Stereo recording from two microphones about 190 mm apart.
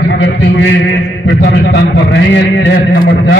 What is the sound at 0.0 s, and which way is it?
A man's voice, 70° left (ahead or behind).